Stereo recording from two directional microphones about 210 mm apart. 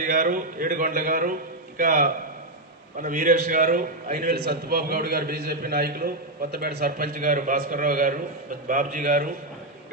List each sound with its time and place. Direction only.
0.0 s a man's voice: 40° right (ahead or behind)